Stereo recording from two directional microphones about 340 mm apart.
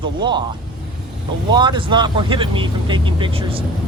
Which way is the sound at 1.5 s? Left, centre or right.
Centre.